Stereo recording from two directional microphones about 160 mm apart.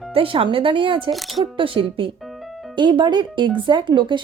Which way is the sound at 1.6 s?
30° right (ahead or behind).